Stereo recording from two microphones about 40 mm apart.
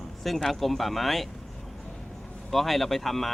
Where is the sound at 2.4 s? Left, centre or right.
Centre.